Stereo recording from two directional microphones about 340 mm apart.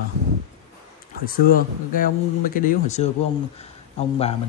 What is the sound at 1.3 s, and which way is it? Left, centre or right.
A man's voice, left.